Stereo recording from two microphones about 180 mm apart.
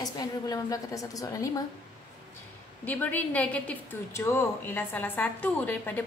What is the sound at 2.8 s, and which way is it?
A woman's voice, 10° left (ahead or behind).